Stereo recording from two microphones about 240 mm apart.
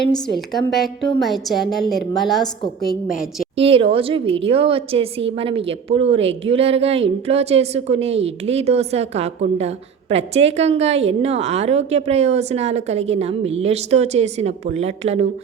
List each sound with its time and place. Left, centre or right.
0.3 s a woman's voice: centre
3.6 s a woman's voice: right